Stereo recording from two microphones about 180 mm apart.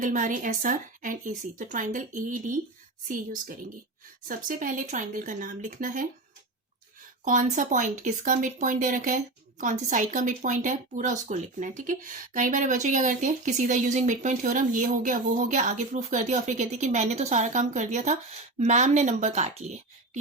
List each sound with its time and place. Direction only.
0.0 s speech: 45° right (ahead or behind)
7.3 s speech: 45° right (ahead or behind)